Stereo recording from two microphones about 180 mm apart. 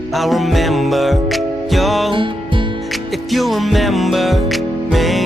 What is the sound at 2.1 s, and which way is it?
Music, 30° right (ahead or behind).